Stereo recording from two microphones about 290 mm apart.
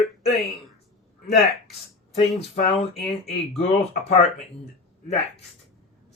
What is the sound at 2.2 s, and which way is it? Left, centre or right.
Speech, left.